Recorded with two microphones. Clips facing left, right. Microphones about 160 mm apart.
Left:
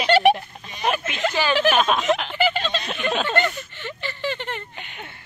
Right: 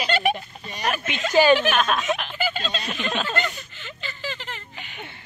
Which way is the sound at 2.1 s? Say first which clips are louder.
Left 5 dB; 65° left (ahead or behind).